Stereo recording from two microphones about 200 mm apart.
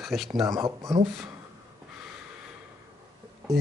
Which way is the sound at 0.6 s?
15° right (ahead or behind).